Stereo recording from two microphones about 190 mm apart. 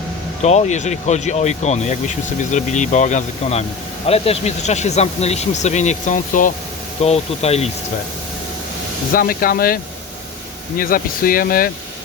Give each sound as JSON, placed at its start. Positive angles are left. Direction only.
{"t": 0.4, "sound": "speech", "side_deg": 35}
{"t": 9.1, "sound": "speech", "side_deg": 50}
{"t": 10.8, "sound": "speech", "side_deg": 50}